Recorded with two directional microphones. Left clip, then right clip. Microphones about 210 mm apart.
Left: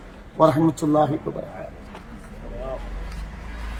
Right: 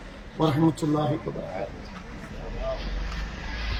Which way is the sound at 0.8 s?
25° left (ahead or behind).